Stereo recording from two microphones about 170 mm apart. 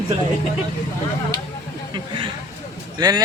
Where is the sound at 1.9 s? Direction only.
30° right (ahead or behind).